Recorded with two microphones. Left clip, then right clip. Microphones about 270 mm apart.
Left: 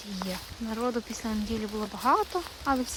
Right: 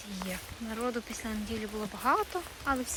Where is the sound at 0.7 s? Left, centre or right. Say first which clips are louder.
Left 4 dB; centre.